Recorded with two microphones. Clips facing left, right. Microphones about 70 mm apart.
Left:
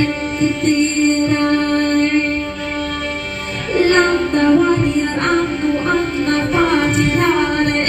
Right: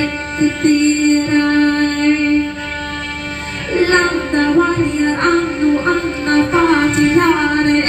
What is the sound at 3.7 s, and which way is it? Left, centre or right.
Music, right.